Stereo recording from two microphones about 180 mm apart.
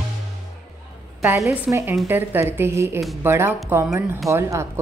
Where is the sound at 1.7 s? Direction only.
15° right (ahead or behind).